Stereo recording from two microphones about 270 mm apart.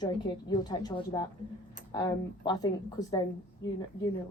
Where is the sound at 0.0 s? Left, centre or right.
Centre.